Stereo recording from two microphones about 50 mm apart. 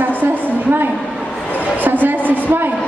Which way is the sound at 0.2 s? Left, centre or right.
Right.